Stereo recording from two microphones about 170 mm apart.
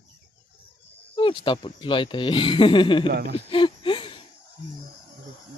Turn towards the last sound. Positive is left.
turn(degrees=30)  # may be behind; listen again after turning